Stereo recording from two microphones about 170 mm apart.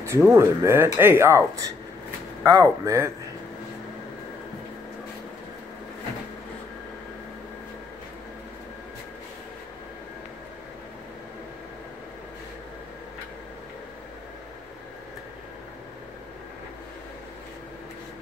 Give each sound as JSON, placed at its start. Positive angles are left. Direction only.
{"t": 0.0, "sound": "speech", "side_deg": -15}